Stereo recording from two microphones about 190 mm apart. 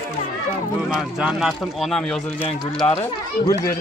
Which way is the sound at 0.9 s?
5° right (ahead or behind).